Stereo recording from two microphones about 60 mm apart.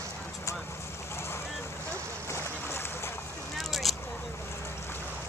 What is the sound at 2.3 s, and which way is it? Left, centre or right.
Boat, left.